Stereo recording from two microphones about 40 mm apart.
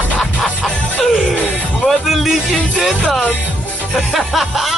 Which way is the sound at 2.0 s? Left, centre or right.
Centre.